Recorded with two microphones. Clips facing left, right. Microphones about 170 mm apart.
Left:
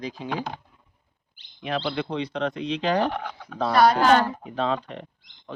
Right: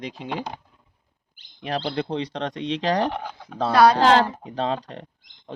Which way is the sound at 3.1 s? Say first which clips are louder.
Even; 15° right (ahead or behind).